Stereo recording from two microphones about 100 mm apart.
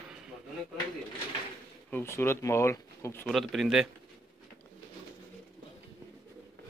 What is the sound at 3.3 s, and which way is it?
Speech, centre (ahead or behind).